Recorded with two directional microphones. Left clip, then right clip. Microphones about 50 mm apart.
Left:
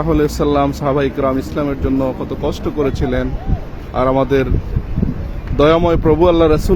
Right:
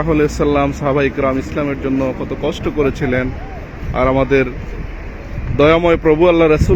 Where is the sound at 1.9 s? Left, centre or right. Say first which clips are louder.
Even; left.